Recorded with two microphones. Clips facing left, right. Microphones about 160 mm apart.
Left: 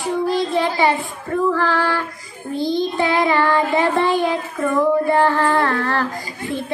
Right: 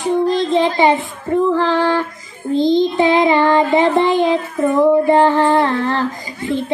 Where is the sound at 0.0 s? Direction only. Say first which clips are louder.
Right 4 dB; 20° right (ahead or behind).